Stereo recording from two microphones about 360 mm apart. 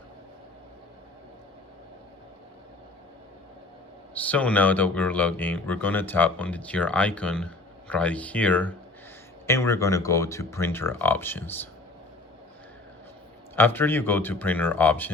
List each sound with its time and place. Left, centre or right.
4.1 s speech: centre
13.6 s speech: centre